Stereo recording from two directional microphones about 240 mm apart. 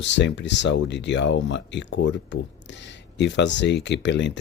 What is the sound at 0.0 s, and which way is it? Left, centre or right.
Speech, left.